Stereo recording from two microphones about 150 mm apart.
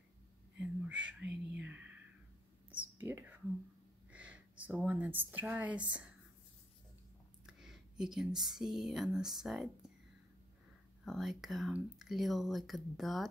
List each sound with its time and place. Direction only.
0.6 s whispering: 10° right (ahead or behind)
4.1 s speech: 10° right (ahead or behind)
7.4 s speech: 5° right (ahead or behind)
11.1 s speech: centre (ahead or behind)